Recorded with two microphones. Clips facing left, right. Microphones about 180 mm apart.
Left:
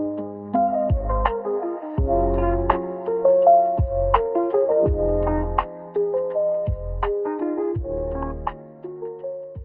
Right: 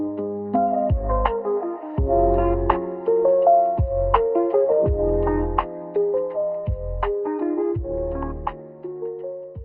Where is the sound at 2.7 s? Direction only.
Centre (ahead or behind).